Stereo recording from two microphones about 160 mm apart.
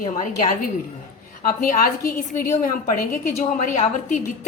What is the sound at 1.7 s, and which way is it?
A woman's voice, 55° left (ahead or behind).